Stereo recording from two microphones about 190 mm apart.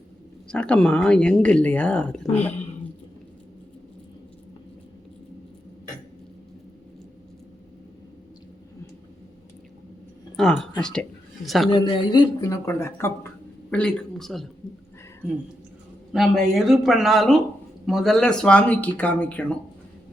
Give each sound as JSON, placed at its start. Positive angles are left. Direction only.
{"t": 0.4, "sound": "speech", "side_deg": 5}
{"t": 10.3, "sound": "a sound", "side_deg": 0}
{"t": 10.8, "sound": "speech", "side_deg": 5}
{"t": 11.7, "sound": "speech", "side_deg": 25}
{"t": 16.1, "sound": "speech", "side_deg": 0}